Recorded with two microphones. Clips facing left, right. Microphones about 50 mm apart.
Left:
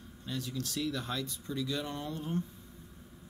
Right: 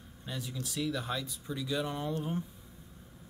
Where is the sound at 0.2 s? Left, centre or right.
Centre.